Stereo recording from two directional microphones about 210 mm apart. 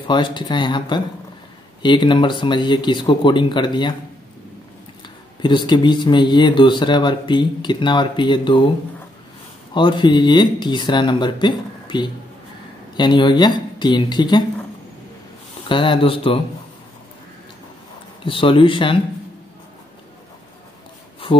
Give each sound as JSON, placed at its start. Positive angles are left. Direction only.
{"t": 0.0, "sound": "speech", "side_deg": 20}
{"t": 5.0, "sound": "speech", "side_deg": 20}
{"t": 9.8, "sound": "speech", "side_deg": 20}
{"t": 15.7, "sound": "speech", "side_deg": 25}
{"t": 18.2, "sound": "speech", "side_deg": 25}
{"t": 21.3, "sound": "speech", "side_deg": 20}